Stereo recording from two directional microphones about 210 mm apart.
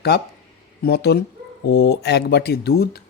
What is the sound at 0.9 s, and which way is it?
A man's voice, 50° left (ahead or behind).